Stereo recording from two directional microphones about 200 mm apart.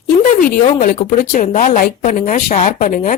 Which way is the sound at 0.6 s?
35° left (ahead or behind).